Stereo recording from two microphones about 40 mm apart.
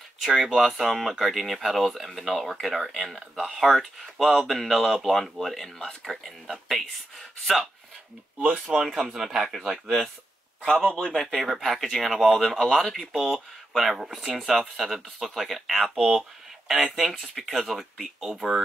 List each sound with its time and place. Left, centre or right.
0.2 s speech: centre
8.4 s speech: right
8.7 s speech: centre
11.0 s speech: centre
11.3 s speech: centre